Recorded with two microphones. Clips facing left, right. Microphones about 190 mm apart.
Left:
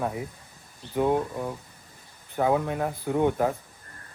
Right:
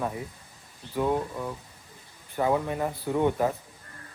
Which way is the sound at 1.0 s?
20° left (ahead or behind).